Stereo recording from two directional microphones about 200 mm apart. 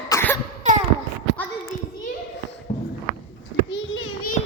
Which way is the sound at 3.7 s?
75° left (ahead or behind).